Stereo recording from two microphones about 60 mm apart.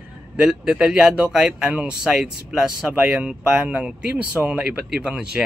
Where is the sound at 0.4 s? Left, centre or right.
Centre.